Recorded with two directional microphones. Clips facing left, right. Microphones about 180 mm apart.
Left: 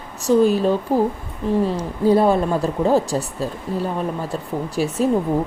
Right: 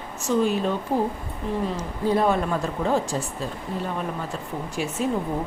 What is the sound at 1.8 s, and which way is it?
Speech, 30° left (ahead or behind).